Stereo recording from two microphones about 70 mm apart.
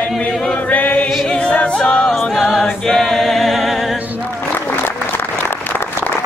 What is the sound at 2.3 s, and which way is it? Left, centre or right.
Choir, centre.